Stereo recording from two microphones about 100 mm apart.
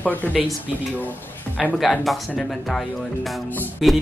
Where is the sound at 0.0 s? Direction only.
20° left (ahead or behind).